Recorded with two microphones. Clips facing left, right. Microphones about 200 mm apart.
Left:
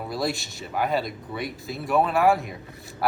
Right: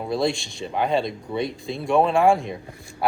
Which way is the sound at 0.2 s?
5° left (ahead or behind).